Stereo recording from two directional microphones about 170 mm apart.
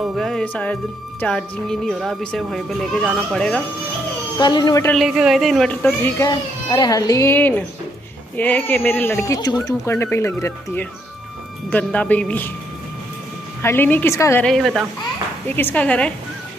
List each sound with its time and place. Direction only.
0.0 s speech: centre (ahead or behind)
4.4 s speech: 25° left (ahead or behind)
4.9 s speech: 5° right (ahead or behind)
6.2 s speech: 25° left (ahead or behind)
13.6 s speech: 15° left (ahead or behind)
14.4 s speech: centre (ahead or behind)
15.4 s speech: 10° left (ahead or behind)